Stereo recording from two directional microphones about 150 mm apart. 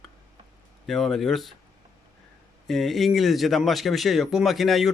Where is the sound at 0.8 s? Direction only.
Centre (ahead or behind).